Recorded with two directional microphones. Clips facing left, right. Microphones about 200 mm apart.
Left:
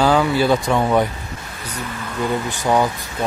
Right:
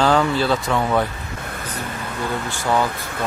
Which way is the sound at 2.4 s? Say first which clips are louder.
Left 1 dB; 15° left (ahead or behind).